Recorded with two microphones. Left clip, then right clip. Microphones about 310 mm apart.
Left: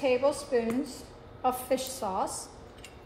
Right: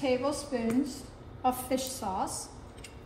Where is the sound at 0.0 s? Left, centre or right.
Left.